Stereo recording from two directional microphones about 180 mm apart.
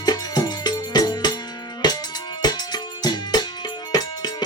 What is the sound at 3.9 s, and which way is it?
Music, 20° left (ahead or behind).